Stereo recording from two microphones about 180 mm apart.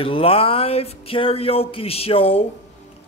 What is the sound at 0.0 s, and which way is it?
A man's voice, 30° left (ahead or behind).